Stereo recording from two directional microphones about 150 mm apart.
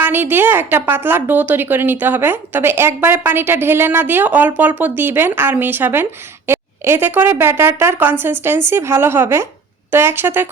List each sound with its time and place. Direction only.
0.0 s a woman's voice: 15° right (ahead or behind)